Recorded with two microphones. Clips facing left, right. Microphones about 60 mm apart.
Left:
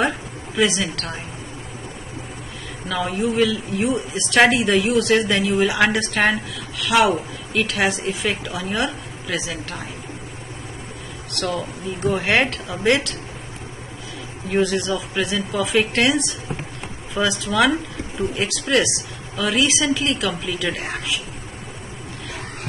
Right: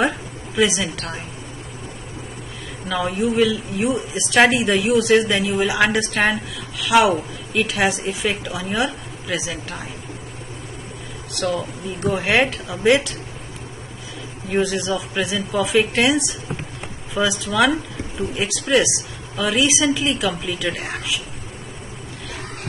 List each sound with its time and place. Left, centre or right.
0.6 s a woman's voice: centre
2.9 s a woman's voice: centre
12.1 s a woman's voice: centre
14.5 s a woman's voice: centre